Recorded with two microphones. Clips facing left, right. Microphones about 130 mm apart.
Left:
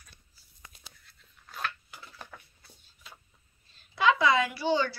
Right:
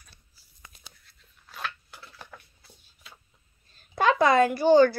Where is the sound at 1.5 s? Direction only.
Centre (ahead or behind).